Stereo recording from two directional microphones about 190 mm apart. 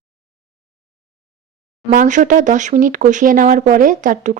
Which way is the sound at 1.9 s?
40° right (ahead or behind).